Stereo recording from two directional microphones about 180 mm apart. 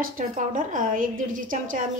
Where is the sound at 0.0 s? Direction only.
45° right (ahead or behind).